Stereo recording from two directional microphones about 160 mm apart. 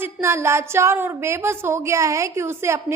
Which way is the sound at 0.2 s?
15° right (ahead or behind).